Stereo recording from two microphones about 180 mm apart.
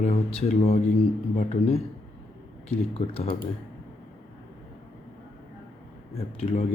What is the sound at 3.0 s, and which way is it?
Speech, 35° left (ahead or behind).